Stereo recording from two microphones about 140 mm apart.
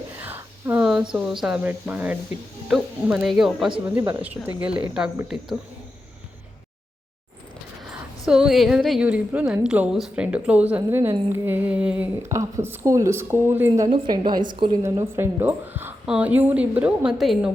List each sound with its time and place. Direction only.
0.2 s a woman's voice: 15° right (ahead or behind)
8.2 s a woman's voice: 5° right (ahead or behind)
13.8 s a woman's voice: 35° right (ahead or behind)
14.8 s a woman's voice: 20° right (ahead or behind); by 17.5 s 5° right (ahead or behind)